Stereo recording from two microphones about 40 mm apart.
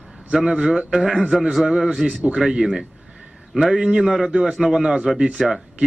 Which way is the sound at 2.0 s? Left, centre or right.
Right.